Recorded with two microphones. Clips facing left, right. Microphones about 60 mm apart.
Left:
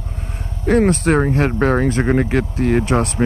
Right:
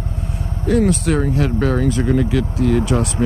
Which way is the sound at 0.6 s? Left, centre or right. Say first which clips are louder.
Left 2 dB; left.